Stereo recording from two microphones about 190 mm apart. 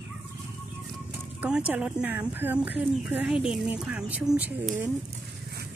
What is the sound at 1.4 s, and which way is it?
Speech, 5° right (ahead or behind).